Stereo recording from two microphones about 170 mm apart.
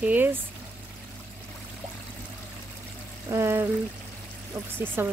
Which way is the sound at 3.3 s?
15° right (ahead or behind).